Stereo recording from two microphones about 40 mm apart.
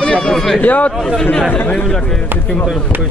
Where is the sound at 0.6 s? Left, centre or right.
Left.